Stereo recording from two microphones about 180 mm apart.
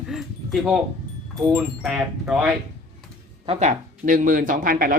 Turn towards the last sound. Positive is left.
turn(degrees=-50)  # may be behind; listen again after turning